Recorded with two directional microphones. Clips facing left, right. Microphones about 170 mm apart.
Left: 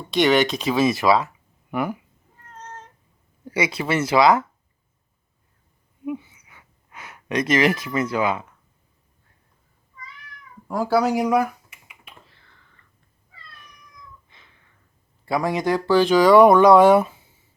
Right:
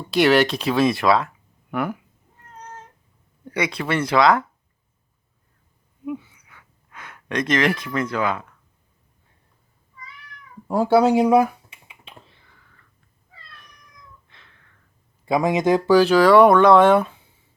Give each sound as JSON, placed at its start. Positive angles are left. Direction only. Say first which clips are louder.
{"t": 0.1, "sound": "speech", "louder": "right 1 dB", "side_deg": -5}
{"t": 3.4, "sound": "speech", "louder": "left 1 dB", "side_deg": 5}
{"t": 6.1, "sound": "gasp", "louder": "left 1 dB", "side_deg": 10}
{"t": 10.7, "sound": "typing", "louder": "right 4 dB", "side_deg": -25}
{"t": 12.4, "sound": "a sound", "louder": "right 1 dB", "side_deg": -10}
{"t": 14.3, "sound": "a sound", "louder": "right 1 dB", "side_deg": 5}
{"t": 15.3, "sound": "speech", "louder": "right 3 dB", "side_deg": -20}
{"t": 16.0, "sound": "speech", "louder": "left 1 dB", "side_deg": 0}